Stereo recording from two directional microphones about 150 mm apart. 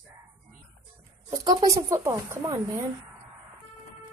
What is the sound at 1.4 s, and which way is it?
Speech, 25° right (ahead or behind).